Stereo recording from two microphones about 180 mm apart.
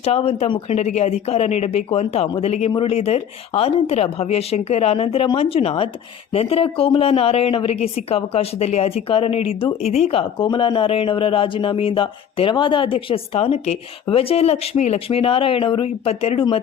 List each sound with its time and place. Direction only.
0.0 s speech: 35° left (ahead or behind)